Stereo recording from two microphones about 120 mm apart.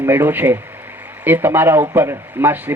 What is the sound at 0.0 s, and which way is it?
A man's voice, 15° right (ahead or behind).